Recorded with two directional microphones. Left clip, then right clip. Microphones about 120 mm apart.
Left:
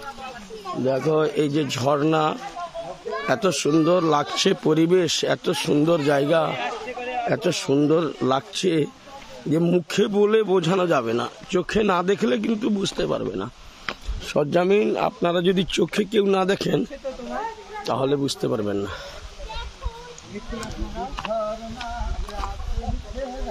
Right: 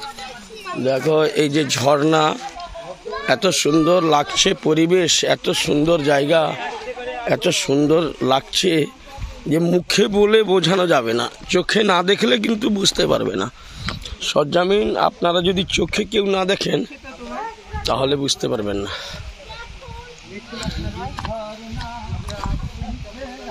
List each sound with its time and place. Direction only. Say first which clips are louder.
1.1 s a man's voice: right 4 dB; 5° right (ahead or behind)
3.1 s speech: right 4 dB; 5° left (ahead or behind)
9.8 s a man's voice: right 4 dB; 15° right (ahead or behind)
12.9 s speech: right 7 dB; 40° right (ahead or behind)
14.2 s a man's voice: right 4 dB; 15° left (ahead or behind)
15.5 s speech: right 3 dB; 30° left (ahead or behind)
17.3 s a sound: right 5 dB; centre (ahead or behind)
17.9 s a man's voice: right 3 dB; 10° left (ahead or behind)